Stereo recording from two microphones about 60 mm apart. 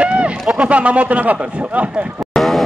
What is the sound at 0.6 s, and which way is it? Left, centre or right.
Speech, right.